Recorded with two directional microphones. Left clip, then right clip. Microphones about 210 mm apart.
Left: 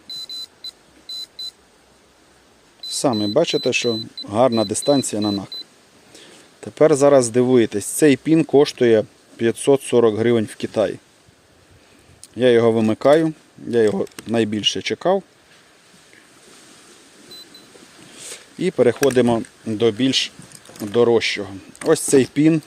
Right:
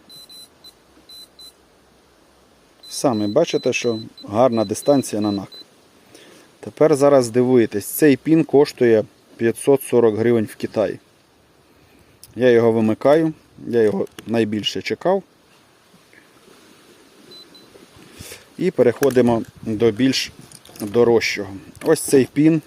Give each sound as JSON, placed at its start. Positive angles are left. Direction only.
{"t": 2.9, "sound": "speech", "side_deg": 0}
{"t": 12.4, "sound": "speech", "side_deg": -5}
{"t": 18.3, "sound": "speech", "side_deg": -5}